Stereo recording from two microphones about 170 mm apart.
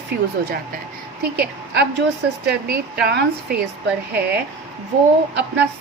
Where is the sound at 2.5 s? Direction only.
65° right (ahead or behind).